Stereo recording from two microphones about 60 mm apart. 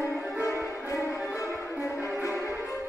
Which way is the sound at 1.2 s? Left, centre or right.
Left.